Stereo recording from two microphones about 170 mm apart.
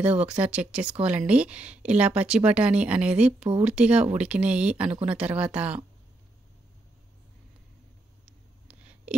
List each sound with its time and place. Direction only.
0.2 s speech: 5° right (ahead or behind)
3.3 s speech: 35° right (ahead or behind)
3.6 s speech: 5° right (ahead or behind)
8.6 s a sound: 10° right (ahead or behind)